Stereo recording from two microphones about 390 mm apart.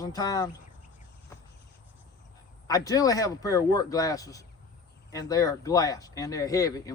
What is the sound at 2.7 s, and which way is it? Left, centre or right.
Speech, centre.